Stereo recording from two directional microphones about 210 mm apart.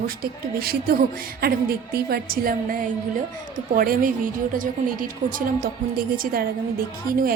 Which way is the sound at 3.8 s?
40° right (ahead or behind).